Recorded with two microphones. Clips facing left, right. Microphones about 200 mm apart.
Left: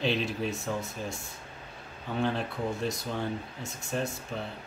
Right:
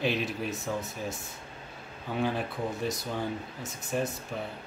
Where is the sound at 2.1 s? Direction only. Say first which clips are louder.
Even; 5° right (ahead or behind).